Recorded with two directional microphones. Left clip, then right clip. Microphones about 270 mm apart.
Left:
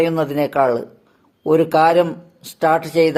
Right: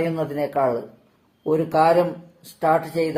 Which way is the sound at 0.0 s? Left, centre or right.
Left.